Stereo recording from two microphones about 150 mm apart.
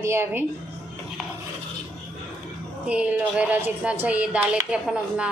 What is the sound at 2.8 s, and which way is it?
Speech, 10° right (ahead or behind).